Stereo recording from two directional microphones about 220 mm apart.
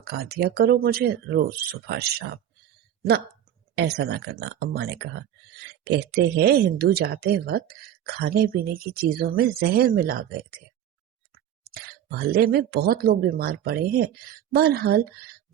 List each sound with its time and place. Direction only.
0.0 s speech: 45° right (ahead or behind)
3.8 s speech: 50° right (ahead or behind)
11.6 s speech: 45° right (ahead or behind)